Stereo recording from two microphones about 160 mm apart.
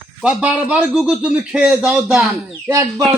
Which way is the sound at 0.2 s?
5° right (ahead or behind).